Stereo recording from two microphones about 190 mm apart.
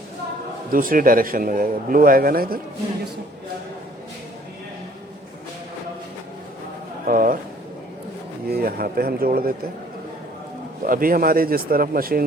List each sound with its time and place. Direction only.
0.7 s a man's voice: 45° right (ahead or behind)
7.1 s a man's voice: 45° right (ahead or behind)
8.4 s a man's voice: 55° right (ahead or behind)
10.8 s a man's voice: 50° right (ahead or behind)